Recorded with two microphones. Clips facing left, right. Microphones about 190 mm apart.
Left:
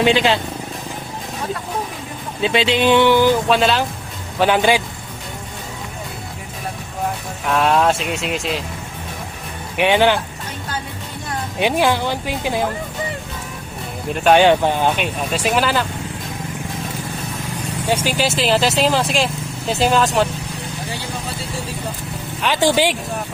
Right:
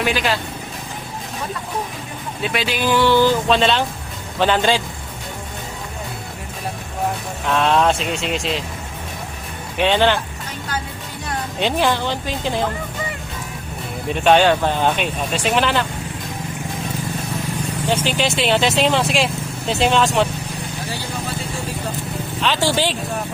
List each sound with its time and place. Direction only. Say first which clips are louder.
0.0 s speech: left 5 dB; 25° left (ahead or behind)
2.4 s speech: left 5 dB; 25° left (ahead or behind)
3.6 s speech: left 1 dB; centre (ahead or behind)
7.4 s speech: left 1 dB; 5° left (ahead or behind)
9.7 s speech: left 2 dB; 15° left (ahead or behind)
11.6 s speech: left 2 dB; 10° left (ahead or behind)
14.1 s speech: even; 5° left (ahead or behind)
14.3 s speech: left 2 dB; 15° left (ahead or behind)
17.8 s speech: left 1 dB; 10° left (ahead or behind)
22.4 s speech: left 3 dB; 15° left (ahead or behind)